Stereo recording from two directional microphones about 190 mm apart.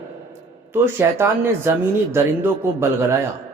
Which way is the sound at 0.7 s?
10° right (ahead or behind).